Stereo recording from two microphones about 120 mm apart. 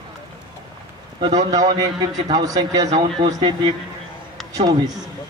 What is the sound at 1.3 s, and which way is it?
A man's voice, 30° right (ahead or behind).